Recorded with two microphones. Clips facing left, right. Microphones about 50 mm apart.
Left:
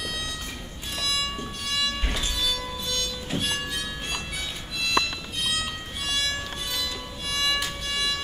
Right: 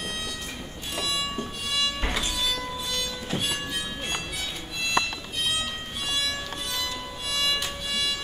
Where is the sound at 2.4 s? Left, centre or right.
Centre.